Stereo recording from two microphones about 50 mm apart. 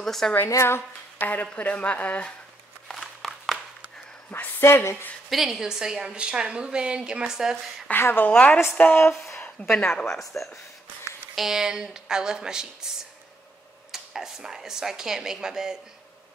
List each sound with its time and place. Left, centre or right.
0.0 s a woman's voice: centre
1.2 s speech: left
2.9 s a sound: centre
4.3 s speech: left
5.3 s a woman's voice: centre
7.9 s a woman's voice: left
9.8 s speech: left
10.0 s a woman's voice: centre
13.9 s a woman's voice: centre